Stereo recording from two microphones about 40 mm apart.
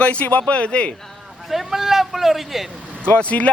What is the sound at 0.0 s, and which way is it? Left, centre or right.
Speech, left.